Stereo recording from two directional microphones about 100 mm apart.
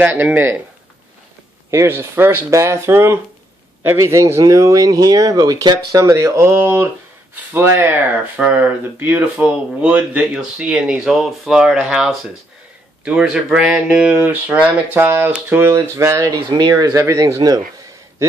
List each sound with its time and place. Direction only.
0.0 s speech: 20° right (ahead or behind)
1.7 s speech: 25° right (ahead or behind)
16.4 s speech: 45° right (ahead or behind)
16.9 s speech: 30° right (ahead or behind)